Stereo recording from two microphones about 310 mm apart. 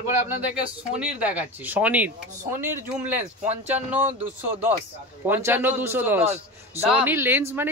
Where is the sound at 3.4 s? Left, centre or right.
Right.